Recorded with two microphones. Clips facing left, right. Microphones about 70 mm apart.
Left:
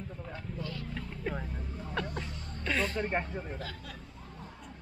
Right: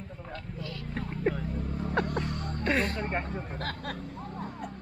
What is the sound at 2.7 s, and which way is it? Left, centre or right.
Speech, right.